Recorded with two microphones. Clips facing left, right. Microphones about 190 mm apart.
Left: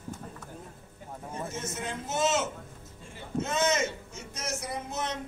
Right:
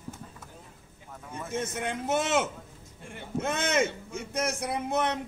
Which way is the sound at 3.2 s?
60° right (ahead or behind).